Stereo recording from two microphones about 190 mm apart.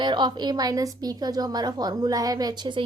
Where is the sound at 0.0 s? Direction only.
25° right (ahead or behind).